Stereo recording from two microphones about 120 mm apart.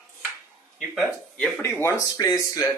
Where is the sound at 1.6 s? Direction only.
25° left (ahead or behind).